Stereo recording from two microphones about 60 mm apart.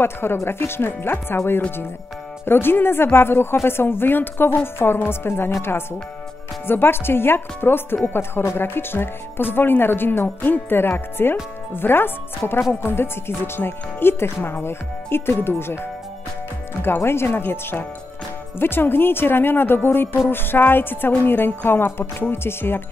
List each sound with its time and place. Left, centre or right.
0.0 s speech: left
16.8 s speech: left